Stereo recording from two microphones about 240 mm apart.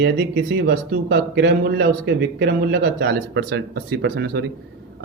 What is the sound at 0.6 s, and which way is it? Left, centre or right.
Speech, right.